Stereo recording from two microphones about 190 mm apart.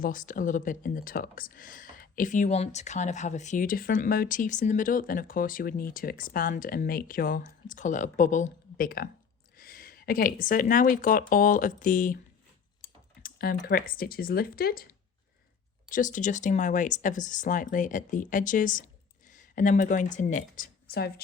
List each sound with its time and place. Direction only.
0.0 s speech: 45° left (ahead or behind)
12.8 s a sound: 15° left (ahead or behind)
13.2 s speech: 50° left (ahead or behind)
15.9 s a woman's voice: 45° left (ahead or behind)